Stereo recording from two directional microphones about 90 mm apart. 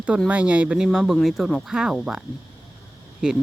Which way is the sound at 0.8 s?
5° right (ahead or behind).